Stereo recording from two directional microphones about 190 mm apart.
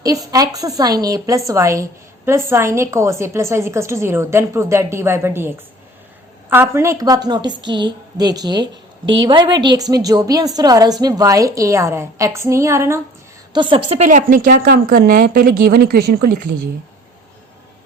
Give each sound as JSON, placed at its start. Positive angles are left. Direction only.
{"t": 0.0, "sound": "a woman's voice", "side_deg": -20}
{"t": 13.5, "sound": "a woman's voice", "side_deg": -25}